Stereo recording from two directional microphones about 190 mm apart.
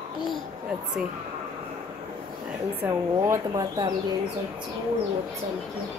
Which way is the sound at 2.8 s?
10° right (ahead or behind).